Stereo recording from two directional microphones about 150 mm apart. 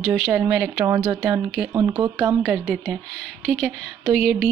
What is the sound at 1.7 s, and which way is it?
Speech, 25° right (ahead or behind).